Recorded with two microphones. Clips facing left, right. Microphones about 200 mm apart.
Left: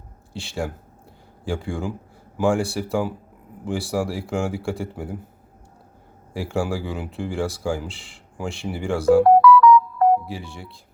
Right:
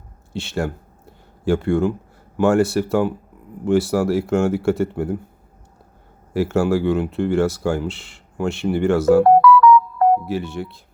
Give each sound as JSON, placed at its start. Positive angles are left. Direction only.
{"t": 0.3, "sound": "a sound", "side_deg": 0}
{"t": 2.4, "sound": "speech", "side_deg": 0}
{"t": 6.3, "sound": "speech", "side_deg": 0}
{"t": 9.2, "sound": "music", "side_deg": -55}
{"t": 10.2, "sound": "speech", "side_deg": 0}